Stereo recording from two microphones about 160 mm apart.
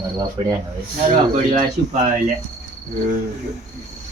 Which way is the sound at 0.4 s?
30° right (ahead or behind).